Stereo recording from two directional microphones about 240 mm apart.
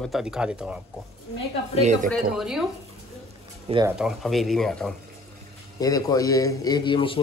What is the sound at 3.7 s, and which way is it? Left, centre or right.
Speech, right.